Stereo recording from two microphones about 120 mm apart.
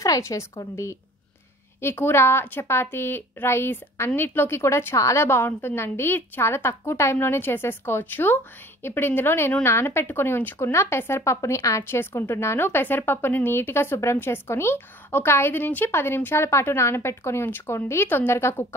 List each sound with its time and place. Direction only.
0.0 s a woman's voice: 30° left (ahead or behind)